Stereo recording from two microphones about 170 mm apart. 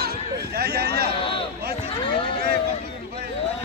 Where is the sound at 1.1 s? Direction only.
30° left (ahead or behind).